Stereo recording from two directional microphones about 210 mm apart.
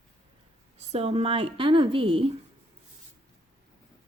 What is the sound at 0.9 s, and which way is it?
A woman's voice, 30° right (ahead or behind).